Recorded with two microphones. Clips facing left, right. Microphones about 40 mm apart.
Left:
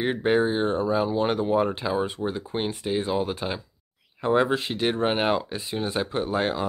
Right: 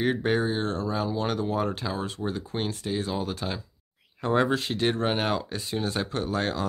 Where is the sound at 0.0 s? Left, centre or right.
Centre.